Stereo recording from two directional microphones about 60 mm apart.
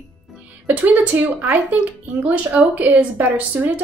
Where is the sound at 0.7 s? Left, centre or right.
Right.